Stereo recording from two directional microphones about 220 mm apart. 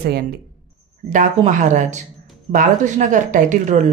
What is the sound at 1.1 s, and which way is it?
Speech, 35° right (ahead or behind).